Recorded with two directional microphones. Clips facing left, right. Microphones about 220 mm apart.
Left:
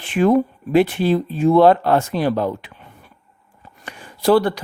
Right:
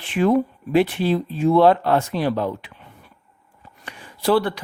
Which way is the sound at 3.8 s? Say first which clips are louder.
Left 4 dB; 45° left (ahead or behind).